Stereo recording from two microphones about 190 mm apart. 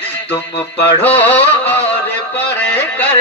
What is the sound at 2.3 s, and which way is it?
Music, 10° left (ahead or behind).